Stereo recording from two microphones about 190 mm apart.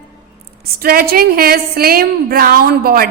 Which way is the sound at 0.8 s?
55° right (ahead or behind).